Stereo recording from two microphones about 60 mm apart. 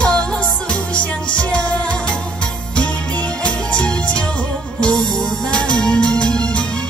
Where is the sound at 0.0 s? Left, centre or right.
Centre.